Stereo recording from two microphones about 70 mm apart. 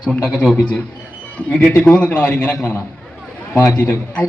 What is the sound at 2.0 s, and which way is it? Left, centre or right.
Speech, left.